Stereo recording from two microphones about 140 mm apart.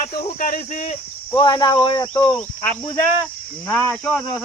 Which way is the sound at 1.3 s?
35° left (ahead or behind).